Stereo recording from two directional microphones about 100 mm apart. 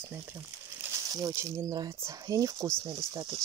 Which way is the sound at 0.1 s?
20° right (ahead or behind).